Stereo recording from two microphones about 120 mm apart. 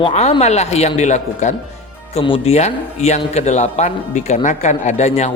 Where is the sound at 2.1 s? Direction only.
55° left (ahead or behind).